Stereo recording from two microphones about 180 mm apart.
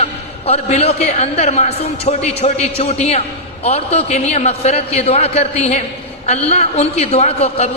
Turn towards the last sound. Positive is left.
turn(degrees=35)  # may be behind; listen again after turning